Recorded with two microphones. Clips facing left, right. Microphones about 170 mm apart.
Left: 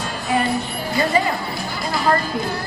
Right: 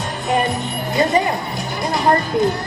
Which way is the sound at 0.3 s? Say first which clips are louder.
Right 2 dB; 20° right (ahead or behind).